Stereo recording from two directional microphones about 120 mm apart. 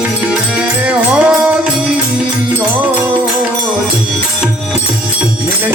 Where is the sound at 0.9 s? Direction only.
10° right (ahead or behind).